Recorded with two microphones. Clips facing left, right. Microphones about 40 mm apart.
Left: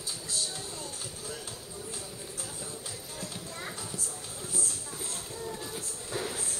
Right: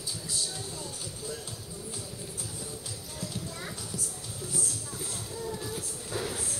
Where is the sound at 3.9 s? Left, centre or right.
Left.